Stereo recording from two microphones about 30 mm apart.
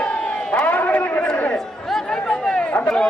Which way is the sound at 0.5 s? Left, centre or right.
Left.